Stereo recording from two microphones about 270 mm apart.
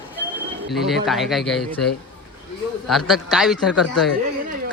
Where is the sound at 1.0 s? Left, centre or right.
Centre.